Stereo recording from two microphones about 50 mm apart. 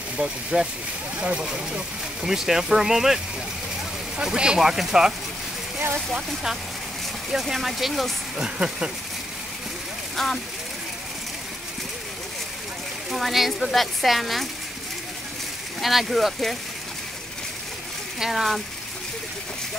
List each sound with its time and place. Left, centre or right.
0.2 s speech: centre
4.2 s speech: centre
6.1 s speech: centre
8.4 s speech: centre
10.1 s speech: centre
13.1 s speech: centre
15.8 s speech: centre
18.2 s speech: centre